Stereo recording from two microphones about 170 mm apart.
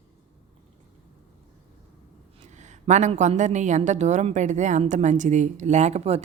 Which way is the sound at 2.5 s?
45° right (ahead or behind).